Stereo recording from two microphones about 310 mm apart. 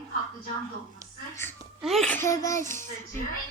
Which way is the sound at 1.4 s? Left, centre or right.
Centre.